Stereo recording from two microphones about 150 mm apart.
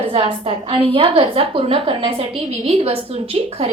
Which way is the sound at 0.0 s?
40° right (ahead or behind).